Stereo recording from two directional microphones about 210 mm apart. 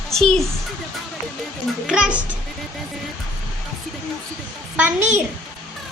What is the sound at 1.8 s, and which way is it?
Speech, 5° right (ahead or behind).